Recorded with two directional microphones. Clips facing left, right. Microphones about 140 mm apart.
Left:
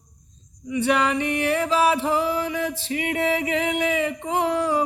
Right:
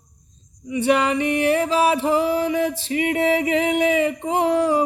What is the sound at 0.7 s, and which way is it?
Music, 25° right (ahead or behind).